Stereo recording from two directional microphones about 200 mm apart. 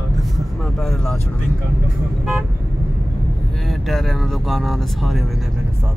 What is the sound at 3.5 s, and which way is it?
Speech, centre (ahead or behind).